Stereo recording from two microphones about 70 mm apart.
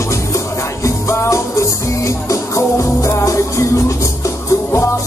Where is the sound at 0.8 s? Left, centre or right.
Left.